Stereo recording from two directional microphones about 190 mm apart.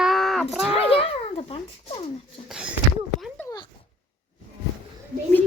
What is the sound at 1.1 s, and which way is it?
Speech, 30° left (ahead or behind).